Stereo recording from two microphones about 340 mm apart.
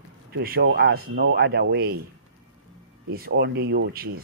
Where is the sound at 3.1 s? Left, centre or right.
Right.